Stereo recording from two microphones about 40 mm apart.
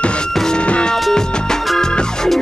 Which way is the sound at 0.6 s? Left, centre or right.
Left.